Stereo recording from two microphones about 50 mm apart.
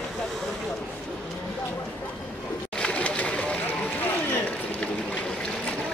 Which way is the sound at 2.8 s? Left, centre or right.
Left.